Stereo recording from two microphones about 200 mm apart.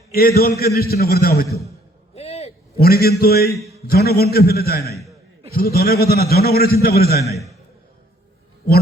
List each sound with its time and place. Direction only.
0.1 s a man's voice: 50° left (ahead or behind)
2.1 s hoot: 30° left (ahead or behind)
2.8 s a man's voice: 50° left (ahead or behind)